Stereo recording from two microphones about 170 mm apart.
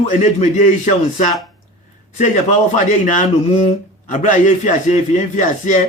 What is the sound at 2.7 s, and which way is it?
A man's voice, 45° left (ahead or behind).